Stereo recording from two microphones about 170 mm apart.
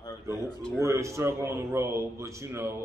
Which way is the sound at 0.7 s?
15° right (ahead or behind).